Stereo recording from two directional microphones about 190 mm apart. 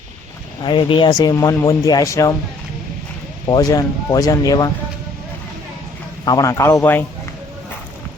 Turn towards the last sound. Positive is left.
turn(degrees=10)  # may be behind; listen again after turning